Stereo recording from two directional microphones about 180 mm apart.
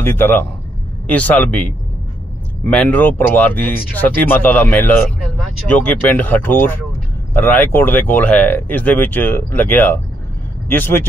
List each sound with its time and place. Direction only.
0.0 s speech: 10° left (ahead or behind)